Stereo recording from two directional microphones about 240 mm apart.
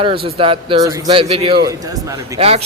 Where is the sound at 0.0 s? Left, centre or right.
Right.